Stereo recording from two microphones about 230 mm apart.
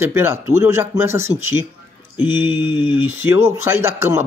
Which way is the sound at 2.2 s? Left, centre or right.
Centre.